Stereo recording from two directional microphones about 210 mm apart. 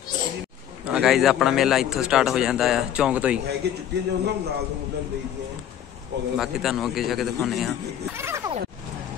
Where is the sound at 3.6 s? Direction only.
50° right (ahead or behind).